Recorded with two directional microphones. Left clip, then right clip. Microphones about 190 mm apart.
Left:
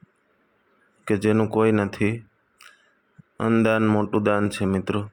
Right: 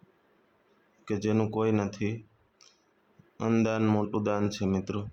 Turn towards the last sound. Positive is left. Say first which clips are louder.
# left 7 dB
turn(degrees=30)  # may be behind; listen again after turning